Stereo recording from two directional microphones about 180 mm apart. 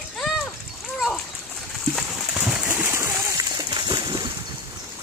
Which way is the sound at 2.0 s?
5° right (ahead or behind).